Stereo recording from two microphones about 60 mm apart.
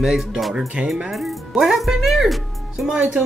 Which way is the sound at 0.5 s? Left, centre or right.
Centre.